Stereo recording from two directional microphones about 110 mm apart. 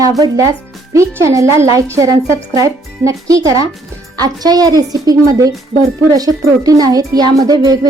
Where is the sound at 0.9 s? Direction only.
30° right (ahead or behind).